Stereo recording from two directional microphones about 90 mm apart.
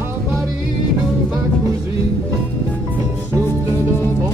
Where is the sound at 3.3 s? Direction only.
35° right (ahead or behind).